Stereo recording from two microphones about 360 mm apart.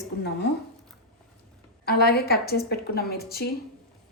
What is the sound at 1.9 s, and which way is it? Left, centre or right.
A woman's voice, left.